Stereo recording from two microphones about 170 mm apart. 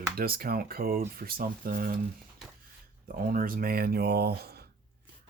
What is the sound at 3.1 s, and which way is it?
Speech, 60° right (ahead or behind).